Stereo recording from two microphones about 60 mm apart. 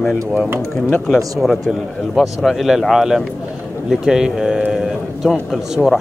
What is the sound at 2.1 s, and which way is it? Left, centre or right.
Speech, centre.